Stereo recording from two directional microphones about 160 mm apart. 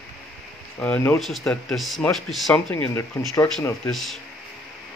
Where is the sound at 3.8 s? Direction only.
Centre (ahead or behind).